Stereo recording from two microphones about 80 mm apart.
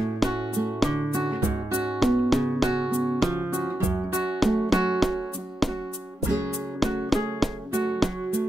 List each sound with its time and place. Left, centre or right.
0.2 s music: centre
6.8 s music: centre